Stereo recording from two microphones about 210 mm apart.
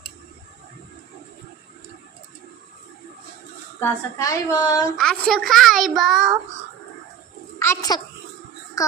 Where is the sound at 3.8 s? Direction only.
15° left (ahead or behind).